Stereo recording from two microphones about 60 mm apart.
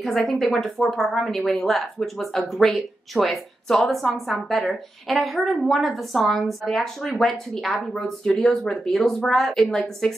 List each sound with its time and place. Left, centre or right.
0.0 s a woman's voice: centre